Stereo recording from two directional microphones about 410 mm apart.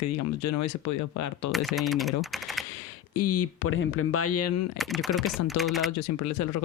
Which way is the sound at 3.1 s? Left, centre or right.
Left.